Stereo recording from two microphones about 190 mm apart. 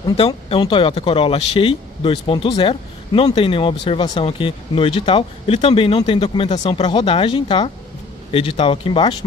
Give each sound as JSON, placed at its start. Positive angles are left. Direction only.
{"t": 0.0, "sound": "speech", "side_deg": 25}